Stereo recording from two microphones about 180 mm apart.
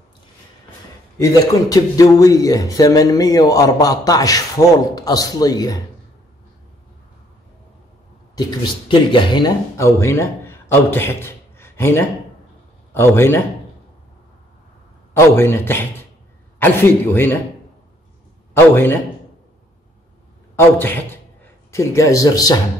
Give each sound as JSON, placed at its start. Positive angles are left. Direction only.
{"t": 1.2, "sound": "speech", "side_deg": 20}
{"t": 8.4, "sound": "a man's voice", "side_deg": 25}
{"t": 15.1, "sound": "a man's voice", "side_deg": 15}
{"t": 18.5, "sound": "a man's voice", "side_deg": 15}
{"t": 20.5, "sound": "a man's voice", "side_deg": 10}